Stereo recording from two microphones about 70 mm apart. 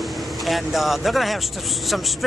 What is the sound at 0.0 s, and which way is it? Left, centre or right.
Speech, centre.